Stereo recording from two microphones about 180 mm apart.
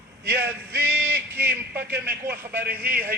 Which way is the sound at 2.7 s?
55° right (ahead or behind).